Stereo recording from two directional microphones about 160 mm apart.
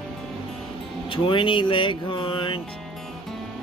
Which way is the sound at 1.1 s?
35° left (ahead or behind).